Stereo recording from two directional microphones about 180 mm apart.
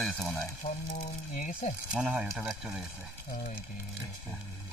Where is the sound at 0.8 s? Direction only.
45° left (ahead or behind).